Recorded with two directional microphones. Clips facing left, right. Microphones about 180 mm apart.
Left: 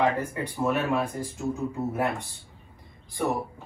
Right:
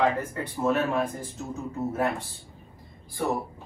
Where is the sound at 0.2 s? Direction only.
15° left (ahead or behind).